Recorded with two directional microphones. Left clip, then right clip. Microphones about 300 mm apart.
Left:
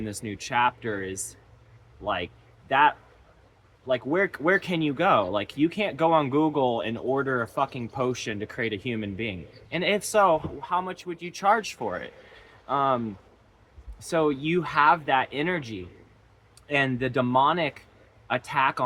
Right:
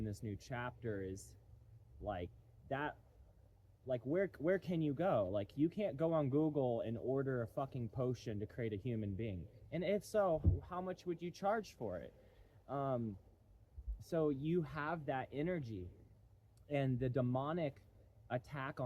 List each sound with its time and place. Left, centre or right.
0.0 s speech: centre
14.1 s speech: centre